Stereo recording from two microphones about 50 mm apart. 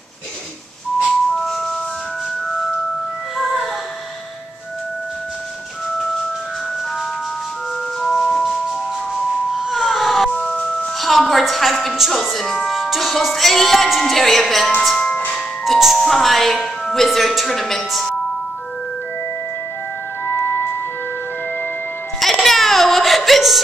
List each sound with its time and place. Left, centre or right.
1.0 s music: centre
3.3 s music: centre
8.0 s music: centre
9.7 s a sound: centre
10.3 s music: centre
11.0 s a sound: centre
12.0 s speech: centre
12.7 s music: centre
15.6 s speech: centre
20.3 s music: left
22.4 s a sound: centre